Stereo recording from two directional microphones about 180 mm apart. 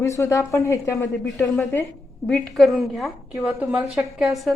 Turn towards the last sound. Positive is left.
turn(degrees=0)  # may be behind; listen again after turning